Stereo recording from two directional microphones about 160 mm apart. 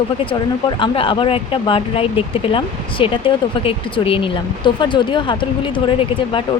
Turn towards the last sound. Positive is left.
turn(degrees=30)  # may be behind; listen again after turning